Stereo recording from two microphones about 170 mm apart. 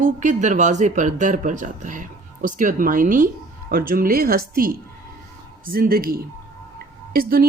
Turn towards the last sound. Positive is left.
turn(degrees=-60)  # may be behind; listen again after turning